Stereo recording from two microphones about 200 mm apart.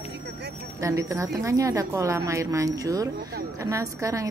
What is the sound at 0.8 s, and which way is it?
A woman's voice, 15° right (ahead or behind).